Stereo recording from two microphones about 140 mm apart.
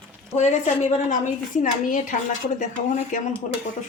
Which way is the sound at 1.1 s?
65° left (ahead or behind).